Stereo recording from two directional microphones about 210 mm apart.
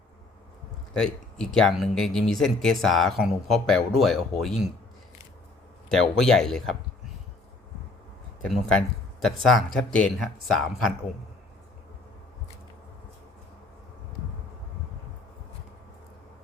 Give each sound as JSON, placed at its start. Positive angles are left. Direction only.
{"t": 0.9, "sound": "speech", "side_deg": 5}
{"t": 5.9, "sound": "speech", "side_deg": 0}
{"t": 8.4, "sound": "speech", "side_deg": 0}